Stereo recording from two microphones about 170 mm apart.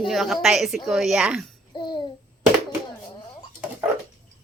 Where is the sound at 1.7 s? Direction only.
25° left (ahead or behind).